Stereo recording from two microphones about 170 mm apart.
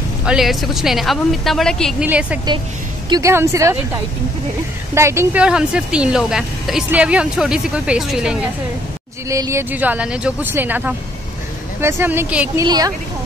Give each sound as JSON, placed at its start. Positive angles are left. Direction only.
{"t": 0.2, "sound": "speech", "side_deg": -5}
{"t": 2.0, "sound": "speech", "side_deg": -10}
{"t": 4.9, "sound": "speech", "side_deg": -15}
{"t": 9.3, "sound": "speech", "side_deg": -15}
{"t": 12.5, "sound": "a woman's voice", "side_deg": -20}